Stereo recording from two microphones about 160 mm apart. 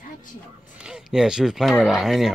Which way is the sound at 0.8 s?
5° right (ahead or behind).